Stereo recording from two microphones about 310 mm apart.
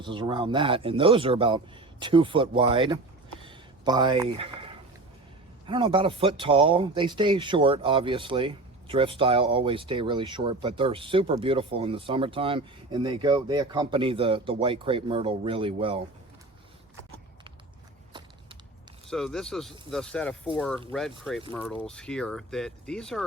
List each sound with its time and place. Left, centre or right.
0.0 s speech: centre
3.4 s a sound: centre
5.6 s speech: centre
19.1 s speech: centre